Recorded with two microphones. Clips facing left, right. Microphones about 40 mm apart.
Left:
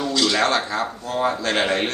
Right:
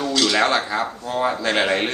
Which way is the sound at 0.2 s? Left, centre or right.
Centre.